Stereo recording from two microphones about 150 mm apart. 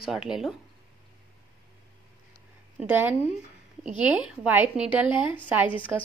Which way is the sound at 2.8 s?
10° right (ahead or behind).